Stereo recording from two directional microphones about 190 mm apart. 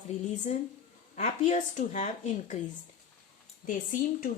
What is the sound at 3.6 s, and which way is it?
Speech, 45° left (ahead or behind).